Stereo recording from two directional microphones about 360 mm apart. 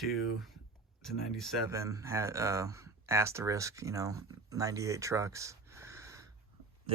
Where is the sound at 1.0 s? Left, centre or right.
Centre.